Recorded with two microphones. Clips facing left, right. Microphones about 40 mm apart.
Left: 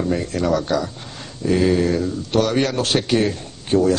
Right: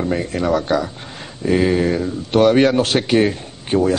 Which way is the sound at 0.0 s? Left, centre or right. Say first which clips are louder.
Right 1 dB; centre.